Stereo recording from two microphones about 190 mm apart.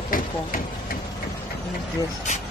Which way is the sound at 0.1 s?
45° left (ahead or behind).